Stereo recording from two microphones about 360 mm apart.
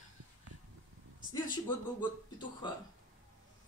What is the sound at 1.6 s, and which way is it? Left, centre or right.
Speech, centre.